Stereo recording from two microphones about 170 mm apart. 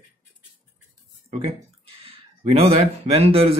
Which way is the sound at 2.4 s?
35° right (ahead or behind).